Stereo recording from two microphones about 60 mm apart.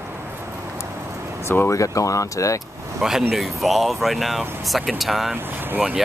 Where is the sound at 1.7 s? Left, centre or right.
Left.